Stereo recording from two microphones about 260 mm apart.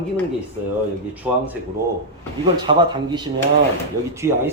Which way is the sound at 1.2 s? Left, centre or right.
Centre.